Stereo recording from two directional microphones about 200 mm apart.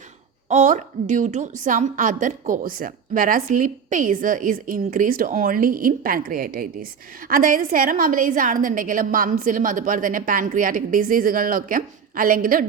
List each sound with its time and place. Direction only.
0.4 s a woman's voice: 35° right (ahead or behind)